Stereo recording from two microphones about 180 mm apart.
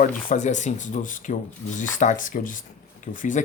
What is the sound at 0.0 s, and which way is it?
A man's voice, 45° left (ahead or behind).